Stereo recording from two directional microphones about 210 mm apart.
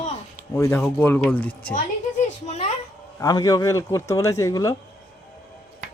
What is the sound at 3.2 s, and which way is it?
A man's voice, 15° left (ahead or behind).